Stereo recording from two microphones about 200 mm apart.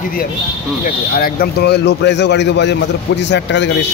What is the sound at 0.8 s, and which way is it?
Speech, 45° left (ahead or behind).